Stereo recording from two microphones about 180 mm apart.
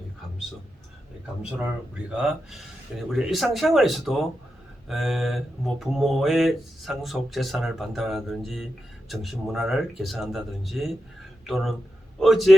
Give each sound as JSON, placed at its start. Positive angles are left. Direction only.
{"t": 2.0, "sound": "speech", "side_deg": -5}